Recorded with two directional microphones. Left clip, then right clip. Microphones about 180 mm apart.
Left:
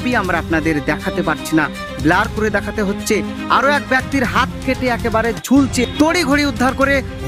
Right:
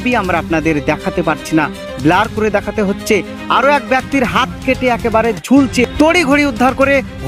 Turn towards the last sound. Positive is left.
turn(degrees=-15)  # may be behind; listen again after turning